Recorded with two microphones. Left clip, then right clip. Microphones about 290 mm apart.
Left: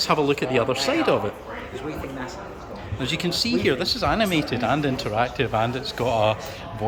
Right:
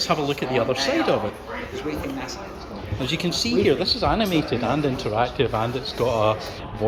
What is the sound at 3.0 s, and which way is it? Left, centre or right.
Speech, centre.